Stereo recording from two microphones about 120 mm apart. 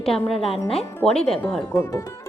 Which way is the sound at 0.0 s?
5° left (ahead or behind).